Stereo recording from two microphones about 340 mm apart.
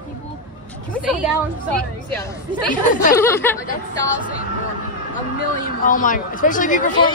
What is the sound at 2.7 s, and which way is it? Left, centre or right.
Speech, left.